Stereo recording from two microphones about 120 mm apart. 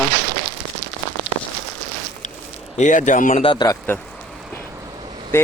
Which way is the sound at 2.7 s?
90° left.